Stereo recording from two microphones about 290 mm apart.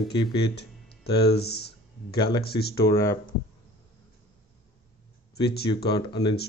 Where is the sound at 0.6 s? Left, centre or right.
Left.